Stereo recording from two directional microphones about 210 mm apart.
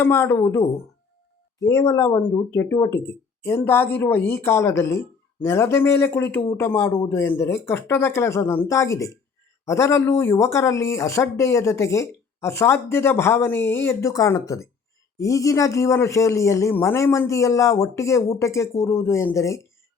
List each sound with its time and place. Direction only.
0.0 s speech: 10° left (ahead or behind)
1.7 s speech: 15° left (ahead or behind)